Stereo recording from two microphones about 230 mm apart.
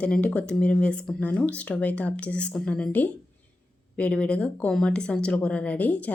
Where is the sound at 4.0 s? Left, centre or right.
Centre.